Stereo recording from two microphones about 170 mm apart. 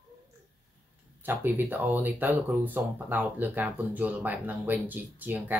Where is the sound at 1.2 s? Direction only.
10° right (ahead or behind).